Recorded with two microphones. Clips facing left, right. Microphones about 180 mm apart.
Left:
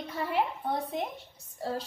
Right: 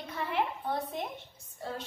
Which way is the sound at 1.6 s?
35° left (ahead or behind).